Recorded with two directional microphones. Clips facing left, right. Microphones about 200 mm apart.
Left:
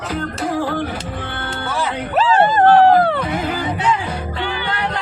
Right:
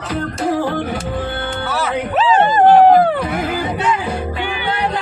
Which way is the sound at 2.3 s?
15° right (ahead or behind).